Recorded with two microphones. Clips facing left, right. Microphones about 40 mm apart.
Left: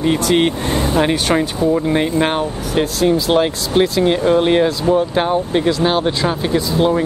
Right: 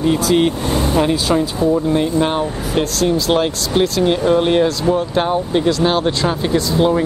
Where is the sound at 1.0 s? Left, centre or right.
Left.